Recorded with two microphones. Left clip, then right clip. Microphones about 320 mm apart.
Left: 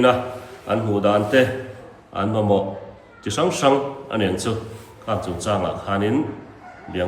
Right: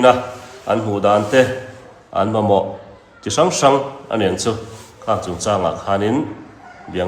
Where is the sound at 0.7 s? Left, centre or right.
Centre.